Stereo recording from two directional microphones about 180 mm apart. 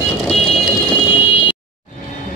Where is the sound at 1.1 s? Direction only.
30° left (ahead or behind).